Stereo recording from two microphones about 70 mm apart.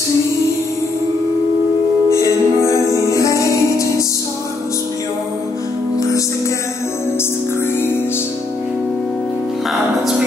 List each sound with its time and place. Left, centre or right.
2.0 s music: left